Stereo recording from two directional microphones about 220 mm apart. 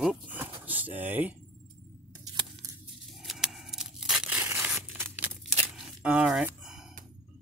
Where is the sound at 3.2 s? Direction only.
Centre (ahead or behind).